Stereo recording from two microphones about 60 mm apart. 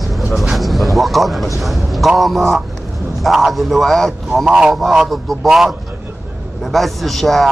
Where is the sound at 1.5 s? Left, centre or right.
Centre.